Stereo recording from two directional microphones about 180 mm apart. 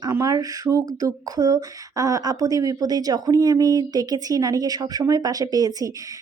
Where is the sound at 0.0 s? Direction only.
20° right (ahead or behind).